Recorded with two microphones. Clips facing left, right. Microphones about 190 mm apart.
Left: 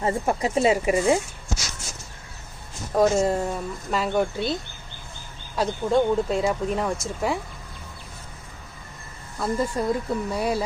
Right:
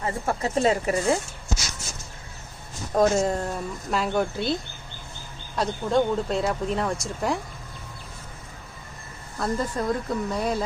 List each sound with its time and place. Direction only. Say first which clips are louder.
0.0 s speech: left 4 dB; 25° left (ahead or behind)
0.4 s speech: left 1 dB; 10° left (ahead or behind)
2.9 s speech: left 1 dB; 5° left (ahead or behind)
5.5 s speech: left 1 dB; 5° left (ahead or behind)
9.4 s speech: left 2 dB; 5° left (ahead or behind)